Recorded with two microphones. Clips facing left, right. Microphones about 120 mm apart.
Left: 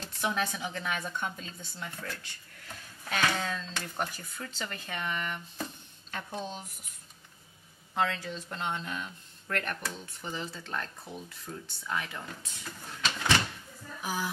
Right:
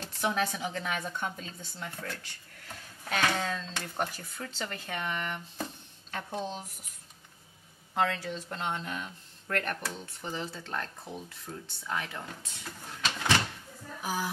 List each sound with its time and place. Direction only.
0.2 s speech: 40° right (ahead or behind)
7.9 s speech: 55° right (ahead or behind)
8.4 s speech: 40° right (ahead or behind)
9.8 s speech: 30° right (ahead or behind)
13.1 s door: 30° right (ahead or behind)